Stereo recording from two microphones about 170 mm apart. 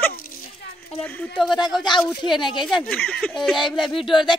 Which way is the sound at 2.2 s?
25° left (ahead or behind).